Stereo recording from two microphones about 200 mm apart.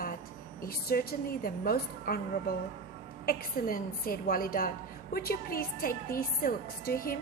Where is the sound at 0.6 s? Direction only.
50° left (ahead or behind).